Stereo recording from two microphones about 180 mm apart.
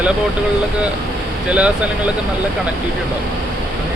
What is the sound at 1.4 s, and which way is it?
Speech, 5° right (ahead or behind).